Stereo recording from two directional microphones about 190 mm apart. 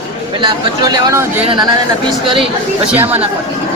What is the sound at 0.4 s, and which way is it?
Speech, 20° right (ahead or behind).